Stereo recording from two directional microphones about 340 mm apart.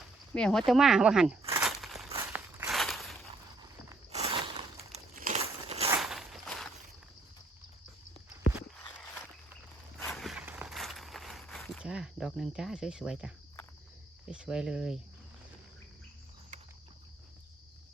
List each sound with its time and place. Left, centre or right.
0.3 s speech: centre
1.4 s a sound: centre
2.0 s walk: centre
3.6 s a sound: centre
5.9 s walk: centre
10.0 s walk: centre
14.3 s speech: centre